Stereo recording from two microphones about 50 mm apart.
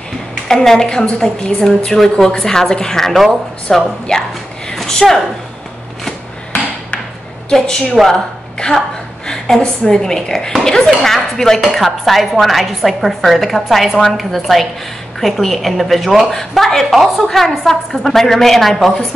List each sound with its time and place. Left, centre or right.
0.5 s a woman's voice: centre
7.4 s a woman's voice: centre
9.3 s a woman's voice: centre